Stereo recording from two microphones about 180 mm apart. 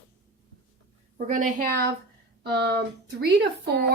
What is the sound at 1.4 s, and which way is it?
A woman's voice, 50° right (ahead or behind).